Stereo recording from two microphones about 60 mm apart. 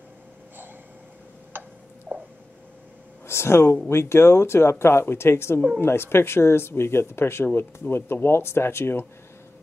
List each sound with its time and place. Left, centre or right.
1.5 s tick-tock: right
2.1 s a sound: right
3.3 s speech: left